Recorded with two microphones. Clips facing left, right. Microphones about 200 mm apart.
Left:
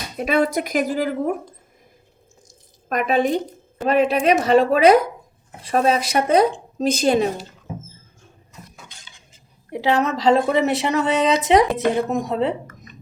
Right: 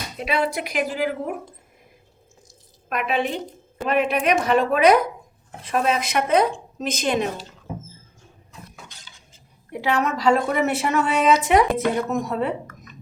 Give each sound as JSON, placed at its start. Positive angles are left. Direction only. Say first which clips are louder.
{"t": 0.2, "sound": "speech", "louder": "left 5 dB", "side_deg": 45}
{"t": 2.9, "sound": "a woman's voice", "louder": "left 5 dB", "side_deg": 40}
{"t": 9.7, "sound": "speech", "louder": "left 3 dB", "side_deg": 25}